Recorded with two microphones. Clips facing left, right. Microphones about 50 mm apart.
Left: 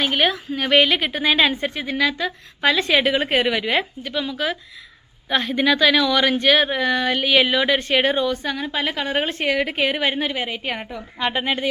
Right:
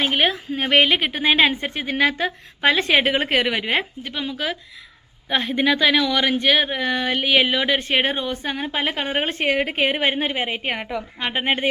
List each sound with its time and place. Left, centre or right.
0.0 s a woman's voice: right
3.2 s a woman's voice: right
3.5 s a woman's voice: right
4.0 s a woman's voice: right
7.9 s a woman's voice: right
10.8 s a woman's voice: right
11.3 s a woman's voice: right